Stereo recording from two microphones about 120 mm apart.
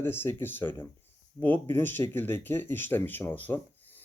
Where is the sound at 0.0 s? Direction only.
20° left (ahead or behind).